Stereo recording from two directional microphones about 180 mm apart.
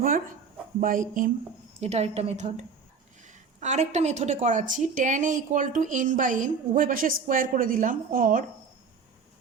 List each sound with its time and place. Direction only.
0.8 s a woman's voice: 45° right (ahead or behind)
1.8 s a woman's voice: 35° right (ahead or behind)